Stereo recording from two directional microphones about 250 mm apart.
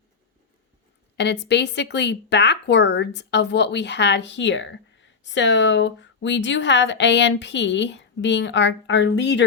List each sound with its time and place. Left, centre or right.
1.1 s speech: left